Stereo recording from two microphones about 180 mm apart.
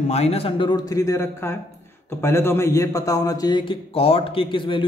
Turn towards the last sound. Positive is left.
turn(degrees=30)  # may be behind; listen again after turning